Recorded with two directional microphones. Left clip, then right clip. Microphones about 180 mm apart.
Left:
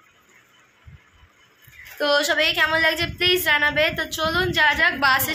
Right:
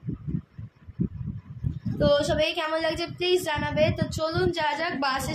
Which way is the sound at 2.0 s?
Centre (ahead or behind).